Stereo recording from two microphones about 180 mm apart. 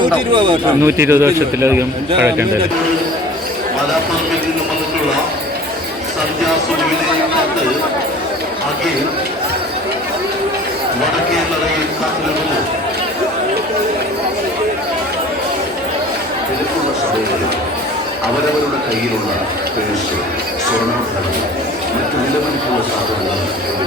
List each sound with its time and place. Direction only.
0.3 s speech: 30° right (ahead or behind)
0.8 s a man's voice: 15° right (ahead or behind)